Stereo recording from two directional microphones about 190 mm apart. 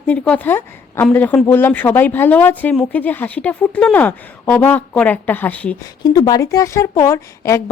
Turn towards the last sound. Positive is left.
turn(degrees=15)  # may be behind; listen again after turning